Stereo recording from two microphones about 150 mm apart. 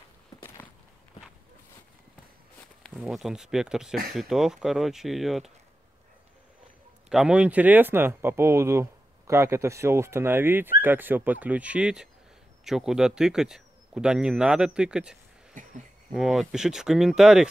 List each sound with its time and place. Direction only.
2.8 s speech: centre (ahead or behind)
7.1 s speech: 5° right (ahead or behind)
15.6 s a sound: 60° right (ahead or behind)
16.1 s speech: 5° right (ahead or behind)